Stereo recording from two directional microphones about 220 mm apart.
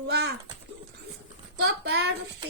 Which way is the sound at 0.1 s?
50° right (ahead or behind).